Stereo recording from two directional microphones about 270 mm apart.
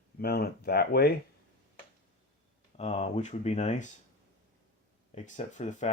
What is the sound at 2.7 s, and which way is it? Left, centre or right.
Speech, left.